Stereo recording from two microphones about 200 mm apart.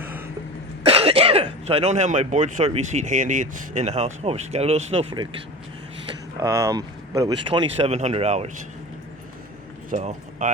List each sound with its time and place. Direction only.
0.0 s throat clearing: 10° right (ahead or behind)
0.9 s speech: 30° right (ahead or behind)
6.4 s speech: 15° right (ahead or behind); by 8.4 s 30° right (ahead or behind)
9.9 s speech: 35° right (ahead or behind)